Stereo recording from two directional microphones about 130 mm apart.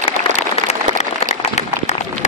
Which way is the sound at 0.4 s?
55° left (ahead or behind).